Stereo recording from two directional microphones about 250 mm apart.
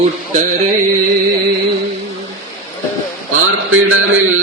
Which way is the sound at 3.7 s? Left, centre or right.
Right.